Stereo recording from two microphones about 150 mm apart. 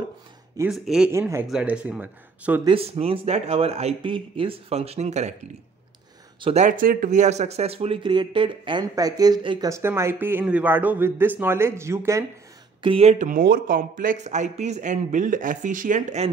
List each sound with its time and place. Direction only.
0.7 s speech: centre (ahead or behind)
1.1 s a man's voice: 20° right (ahead or behind)
2.6 s speech: 40° right (ahead or behind)
6.4 s speech: 45° right (ahead or behind)
6.8 s speech: 65° right (ahead or behind); by 9.7 s 30° right (ahead or behind)
9.7 s a man's voice: 20° right (ahead or behind)
12.8 s speech: 40° right (ahead or behind)